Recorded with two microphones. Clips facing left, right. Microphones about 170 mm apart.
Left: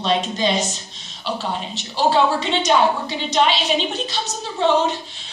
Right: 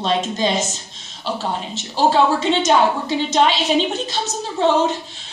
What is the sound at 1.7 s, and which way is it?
A woman's voice, 45° right (ahead or behind).